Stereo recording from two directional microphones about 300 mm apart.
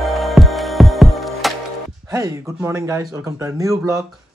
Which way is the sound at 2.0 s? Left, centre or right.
Centre.